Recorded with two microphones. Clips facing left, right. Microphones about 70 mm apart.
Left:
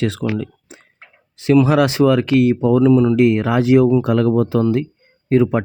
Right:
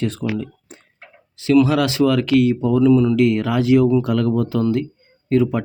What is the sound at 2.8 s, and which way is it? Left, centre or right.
Speech, left.